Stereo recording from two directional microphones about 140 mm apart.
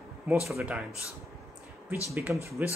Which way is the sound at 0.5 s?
10° right (ahead or behind).